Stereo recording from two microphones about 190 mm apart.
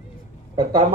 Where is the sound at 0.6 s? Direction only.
20° right (ahead or behind).